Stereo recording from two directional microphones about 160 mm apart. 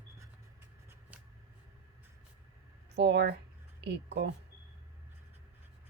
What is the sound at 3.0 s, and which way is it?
Speech, 90° right.